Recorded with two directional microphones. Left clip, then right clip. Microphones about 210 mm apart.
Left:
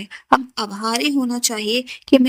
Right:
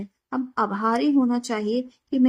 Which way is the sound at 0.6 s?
Centre (ahead or behind).